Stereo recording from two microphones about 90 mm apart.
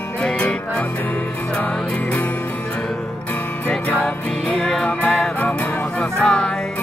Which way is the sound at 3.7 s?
10° left (ahead or behind).